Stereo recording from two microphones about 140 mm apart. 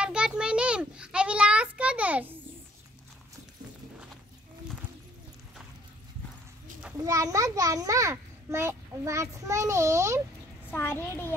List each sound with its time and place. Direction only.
0.0 s a sound: 5° right (ahead or behind)
7.0 s a child's voice: 25° right (ahead or behind)
10.7 s a child's voice: 15° left (ahead or behind)